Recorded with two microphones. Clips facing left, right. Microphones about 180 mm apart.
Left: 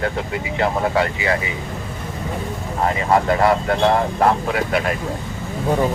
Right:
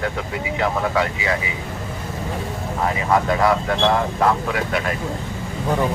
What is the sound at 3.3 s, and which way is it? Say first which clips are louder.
Speech: left 2 dB; 40° left (ahead or behind).